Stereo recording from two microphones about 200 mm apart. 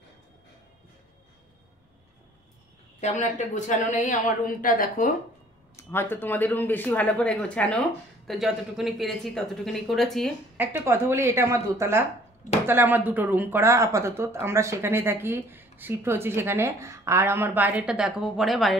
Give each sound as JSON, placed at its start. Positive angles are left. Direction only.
{"t": 3.0, "sound": "speech", "side_deg": 35}
{"t": 5.8, "sound": "speech", "side_deg": 10}
{"t": 10.6, "sound": "speech", "side_deg": -10}